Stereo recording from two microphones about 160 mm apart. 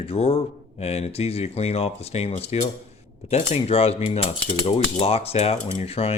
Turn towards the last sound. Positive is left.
turn(degrees=40)  # may be behind; listen again after turning